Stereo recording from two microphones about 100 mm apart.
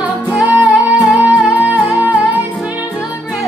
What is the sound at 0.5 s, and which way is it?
Music, 15° right (ahead or behind).